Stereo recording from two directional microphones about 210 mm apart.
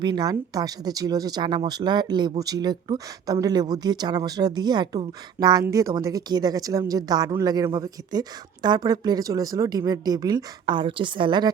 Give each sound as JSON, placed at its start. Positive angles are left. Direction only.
{"t": 0.0, "sound": "speech", "side_deg": -20}